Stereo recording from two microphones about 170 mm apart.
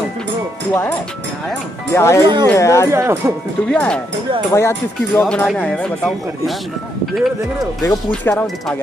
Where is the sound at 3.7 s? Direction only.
5° left (ahead or behind).